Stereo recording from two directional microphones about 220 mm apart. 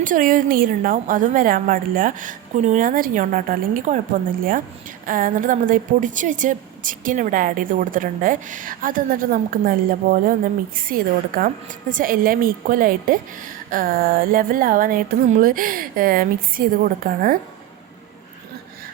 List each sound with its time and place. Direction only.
0.0 s a woman's voice: 35° right (ahead or behind)